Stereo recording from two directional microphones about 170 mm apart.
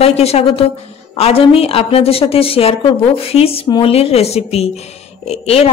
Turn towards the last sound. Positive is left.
turn(degrees=35)  # may be behind; listen again after turning